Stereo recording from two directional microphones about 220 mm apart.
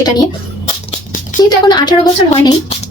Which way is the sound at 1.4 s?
20° left (ahead or behind).